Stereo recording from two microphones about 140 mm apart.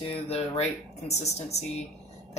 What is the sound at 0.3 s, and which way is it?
Speech, 50° left (ahead or behind).